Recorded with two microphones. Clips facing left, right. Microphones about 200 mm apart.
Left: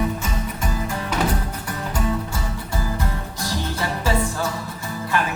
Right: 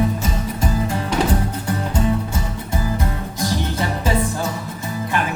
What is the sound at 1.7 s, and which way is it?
Music, 25° right (ahead or behind).